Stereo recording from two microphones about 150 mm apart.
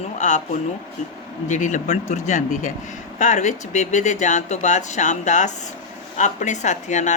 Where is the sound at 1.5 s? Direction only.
55° left (ahead or behind).